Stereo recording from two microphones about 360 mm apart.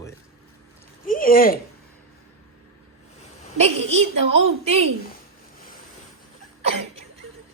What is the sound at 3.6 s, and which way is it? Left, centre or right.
Speech, centre.